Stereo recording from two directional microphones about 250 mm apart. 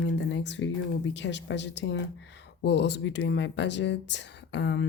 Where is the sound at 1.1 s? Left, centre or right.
Left.